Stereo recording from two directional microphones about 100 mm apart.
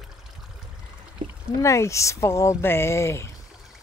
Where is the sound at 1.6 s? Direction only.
30° left (ahead or behind).